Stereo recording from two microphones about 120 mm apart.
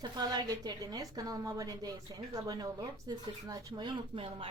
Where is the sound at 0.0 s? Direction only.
35° right (ahead or behind).